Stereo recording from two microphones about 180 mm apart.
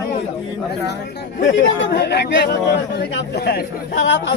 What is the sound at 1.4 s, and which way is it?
A man's voice, 90° left.